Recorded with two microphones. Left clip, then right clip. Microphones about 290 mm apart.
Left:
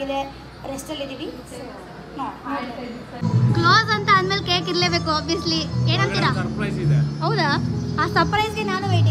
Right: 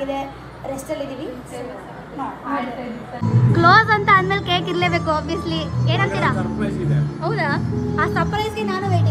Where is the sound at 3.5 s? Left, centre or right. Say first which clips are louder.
Right 4 dB; centre.